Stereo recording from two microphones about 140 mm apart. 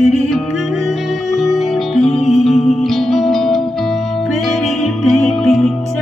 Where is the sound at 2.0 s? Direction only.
45° left (ahead or behind).